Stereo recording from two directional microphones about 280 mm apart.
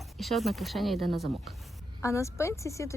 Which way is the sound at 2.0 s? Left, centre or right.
Centre.